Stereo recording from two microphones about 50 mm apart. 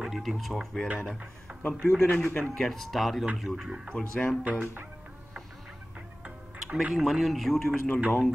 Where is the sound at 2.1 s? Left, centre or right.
Left.